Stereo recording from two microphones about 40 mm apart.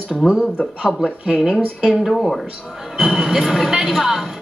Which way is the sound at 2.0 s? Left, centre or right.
Centre.